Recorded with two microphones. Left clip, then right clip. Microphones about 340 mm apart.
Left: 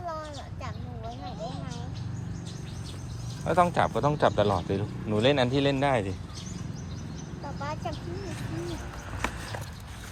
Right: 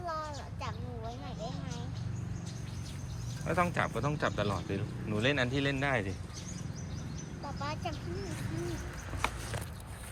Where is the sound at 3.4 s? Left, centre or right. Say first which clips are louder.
Left 8 dB; centre.